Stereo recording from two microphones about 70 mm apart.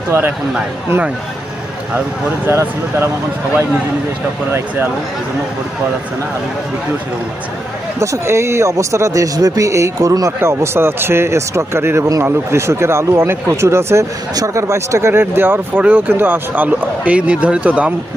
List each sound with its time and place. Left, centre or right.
0.1 s a man's voice: right
2.5 s a man's voice: right
7.9 s speech: right
10.4 s a man's voice: right; by 17.9 s centre